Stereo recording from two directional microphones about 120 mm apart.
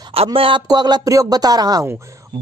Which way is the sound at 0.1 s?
50° right (ahead or behind).